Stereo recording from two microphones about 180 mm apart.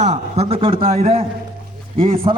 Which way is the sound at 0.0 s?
35° right (ahead or behind).